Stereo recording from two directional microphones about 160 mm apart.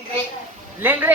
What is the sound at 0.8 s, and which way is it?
Speech, 10° right (ahead or behind).